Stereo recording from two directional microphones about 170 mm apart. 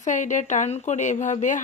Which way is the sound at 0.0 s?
45° left (ahead or behind).